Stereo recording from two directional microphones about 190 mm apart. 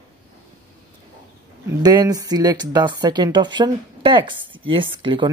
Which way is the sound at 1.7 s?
20° right (ahead or behind).